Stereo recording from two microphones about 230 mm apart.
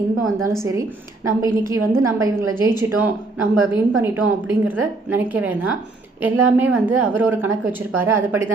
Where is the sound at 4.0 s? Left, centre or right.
Centre.